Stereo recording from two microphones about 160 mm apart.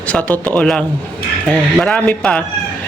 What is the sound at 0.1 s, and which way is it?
Speech, 10° left (ahead or behind).